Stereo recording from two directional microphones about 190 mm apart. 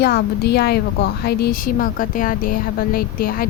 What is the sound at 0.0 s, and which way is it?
A woman's voice, 60° left (ahead or behind).